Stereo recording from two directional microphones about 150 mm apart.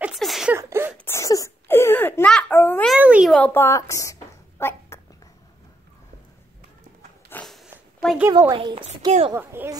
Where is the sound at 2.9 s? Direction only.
5° right (ahead or behind).